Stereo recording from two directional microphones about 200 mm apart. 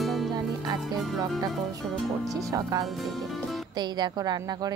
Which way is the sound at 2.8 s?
Centre (ahead or behind).